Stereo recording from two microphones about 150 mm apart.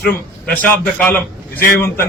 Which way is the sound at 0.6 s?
10° left (ahead or behind).